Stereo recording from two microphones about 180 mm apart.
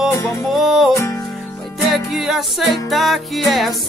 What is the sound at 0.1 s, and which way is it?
Music, 15° left (ahead or behind).